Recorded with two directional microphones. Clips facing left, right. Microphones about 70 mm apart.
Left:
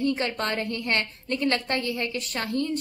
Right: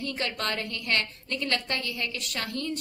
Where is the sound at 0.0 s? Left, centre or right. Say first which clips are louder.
Left 5 dB; left.